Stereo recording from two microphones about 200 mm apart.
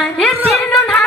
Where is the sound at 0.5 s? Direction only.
Centre (ahead or behind).